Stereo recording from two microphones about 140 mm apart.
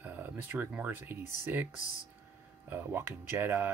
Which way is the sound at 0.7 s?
10° right (ahead or behind).